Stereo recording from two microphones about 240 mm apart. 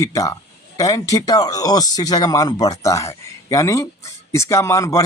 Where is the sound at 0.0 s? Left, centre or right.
Centre.